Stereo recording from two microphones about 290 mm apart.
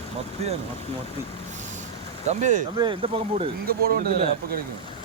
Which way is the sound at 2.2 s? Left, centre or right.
Right.